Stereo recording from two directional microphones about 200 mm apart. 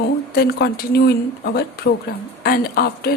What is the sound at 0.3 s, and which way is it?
Speech, 50° left (ahead or behind).